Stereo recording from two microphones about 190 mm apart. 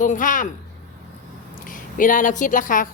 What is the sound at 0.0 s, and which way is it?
Speech, 45° left (ahead or behind).